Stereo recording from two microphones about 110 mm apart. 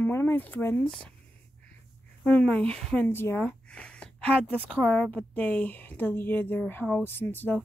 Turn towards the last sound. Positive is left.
turn(degrees=15)  # may be behind; listen again after turning